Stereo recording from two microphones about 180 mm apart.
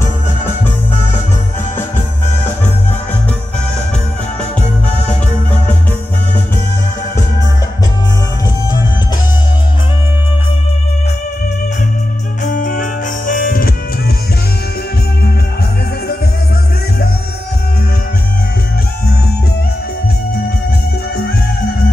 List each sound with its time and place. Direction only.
12.4 s music: 45° left (ahead or behind)